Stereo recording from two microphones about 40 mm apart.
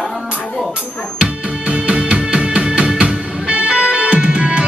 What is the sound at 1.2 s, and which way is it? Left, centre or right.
Music, right.